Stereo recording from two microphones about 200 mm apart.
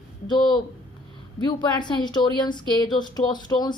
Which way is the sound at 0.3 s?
20° left (ahead or behind).